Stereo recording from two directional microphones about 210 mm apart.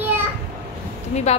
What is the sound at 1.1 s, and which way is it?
Speech, 30° left (ahead or behind).